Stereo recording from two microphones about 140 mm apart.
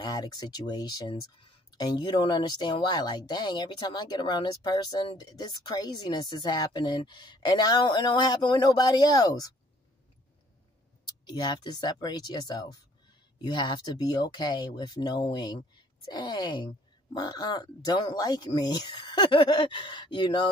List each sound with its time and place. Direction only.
0.0 s speech: 30° left (ahead or behind)
11.1 s speech: 30° left (ahead or behind)